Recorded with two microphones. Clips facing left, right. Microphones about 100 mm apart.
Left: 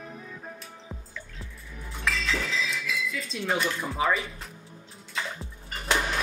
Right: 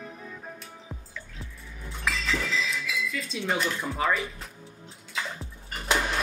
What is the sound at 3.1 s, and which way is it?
Dishes, centre (ahead or behind).